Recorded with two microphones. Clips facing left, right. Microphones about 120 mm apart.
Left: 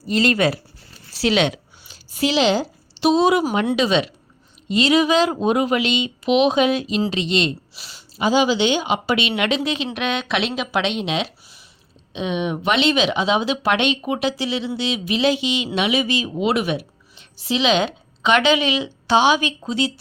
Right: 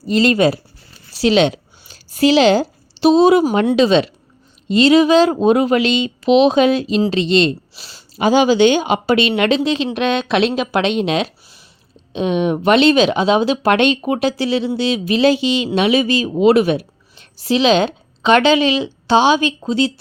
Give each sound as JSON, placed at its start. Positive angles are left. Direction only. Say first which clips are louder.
{"t": 0.0, "sound": "speech", "louder": "right 5 dB", "side_deg": -25}
{"t": 1.9, "sound": "a sound", "louder": "right 8 dB", "side_deg": -40}
{"t": 3.8, "sound": "speech", "louder": "right 6 dB", "side_deg": -30}
{"t": 8.2, "sound": "speech", "louder": "right 6 dB", "side_deg": -55}